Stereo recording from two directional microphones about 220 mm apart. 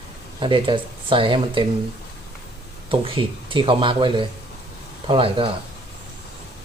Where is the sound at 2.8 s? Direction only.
25° right (ahead or behind).